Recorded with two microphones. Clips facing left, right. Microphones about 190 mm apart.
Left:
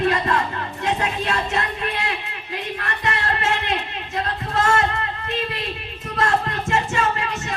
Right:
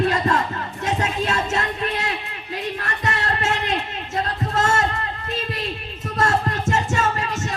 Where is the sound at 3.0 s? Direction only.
40° right (ahead or behind).